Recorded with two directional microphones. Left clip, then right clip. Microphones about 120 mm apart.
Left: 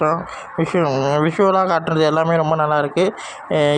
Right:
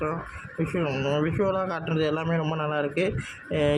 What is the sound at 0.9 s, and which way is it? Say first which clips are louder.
Speech: left 9 dB; 25° left (ahead or behind).